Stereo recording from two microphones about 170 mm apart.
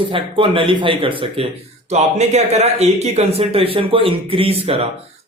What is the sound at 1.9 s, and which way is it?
Speech, 40° right (ahead or behind).